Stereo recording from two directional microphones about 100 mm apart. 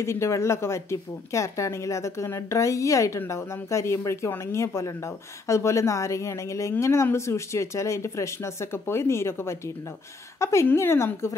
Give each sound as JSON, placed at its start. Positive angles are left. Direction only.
{"t": 0.0, "sound": "speech", "side_deg": 25}